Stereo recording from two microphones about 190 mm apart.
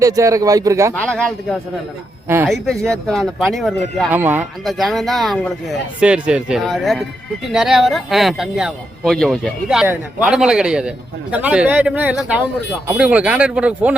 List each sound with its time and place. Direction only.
0.0 s a man's voice: 15° right (ahead or behind)
0.9 s speech: 5° left (ahead or behind)
2.2 s speech: 15° right (ahead or behind)
2.5 s speech: 5° left (ahead or behind)
4.1 s a man's voice: 10° right (ahead or behind)